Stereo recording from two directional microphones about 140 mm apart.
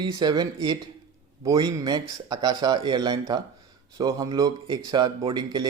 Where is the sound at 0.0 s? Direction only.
30° right (ahead or behind).